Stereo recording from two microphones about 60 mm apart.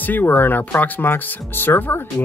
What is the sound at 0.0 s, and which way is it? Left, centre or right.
Speech, left.